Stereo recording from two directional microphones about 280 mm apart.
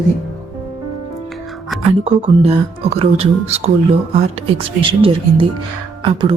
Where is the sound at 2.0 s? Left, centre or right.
Centre.